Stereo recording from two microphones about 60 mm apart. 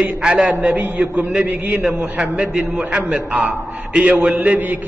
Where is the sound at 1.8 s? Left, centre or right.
Centre.